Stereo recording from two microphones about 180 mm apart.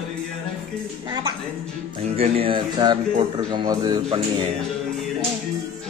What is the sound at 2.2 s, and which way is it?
Speech, 30° right (ahead or behind).